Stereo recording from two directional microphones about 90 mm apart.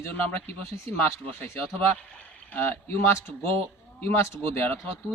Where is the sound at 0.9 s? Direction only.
25° left (ahead or behind).